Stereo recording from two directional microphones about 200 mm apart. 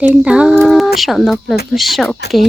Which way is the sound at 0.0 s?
5° right (ahead or behind).